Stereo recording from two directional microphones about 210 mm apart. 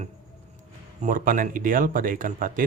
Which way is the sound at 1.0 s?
40° right (ahead or behind).